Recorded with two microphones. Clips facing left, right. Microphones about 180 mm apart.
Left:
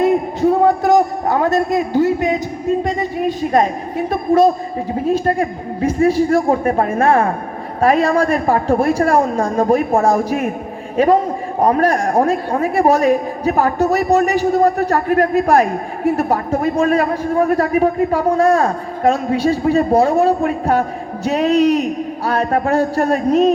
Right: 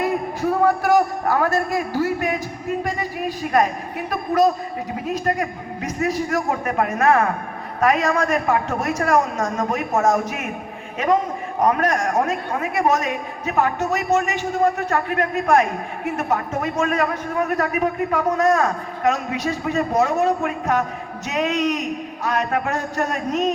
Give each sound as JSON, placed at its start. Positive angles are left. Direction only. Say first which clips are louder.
{"t": 0.0, "sound": "a man's voice", "louder": "left 8 dB", "side_deg": 25}